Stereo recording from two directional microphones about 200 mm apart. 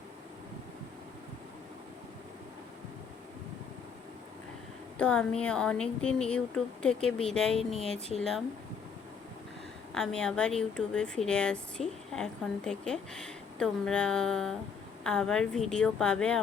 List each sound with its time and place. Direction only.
4.9 s a woman's voice: 5° left (ahead or behind)
9.9 s a woman's voice: 5° left (ahead or behind)